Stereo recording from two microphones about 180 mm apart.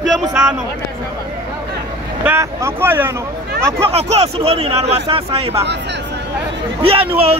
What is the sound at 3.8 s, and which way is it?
Speech, 35° right (ahead or behind).